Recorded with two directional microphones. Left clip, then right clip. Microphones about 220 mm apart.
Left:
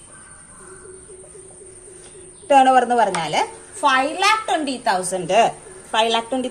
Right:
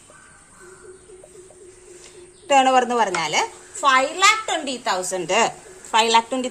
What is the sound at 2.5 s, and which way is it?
A woman's voice, 30° right (ahead or behind).